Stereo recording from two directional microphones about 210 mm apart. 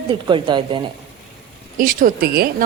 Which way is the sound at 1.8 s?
40° right (ahead or behind).